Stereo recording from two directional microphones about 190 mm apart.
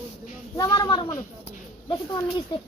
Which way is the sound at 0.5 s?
20° left (ahead or behind).